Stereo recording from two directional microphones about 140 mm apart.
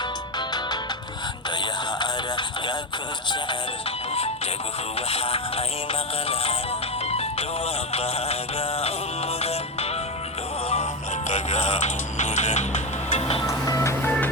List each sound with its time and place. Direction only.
0.3 s music: 30° left (ahead or behind)
2.0 s a sound: 35° left (ahead or behind)
4.9 s music: 45° left (ahead or behind)
11.3 s music: 55° left (ahead or behind)
13.5 s music: 20° left (ahead or behind)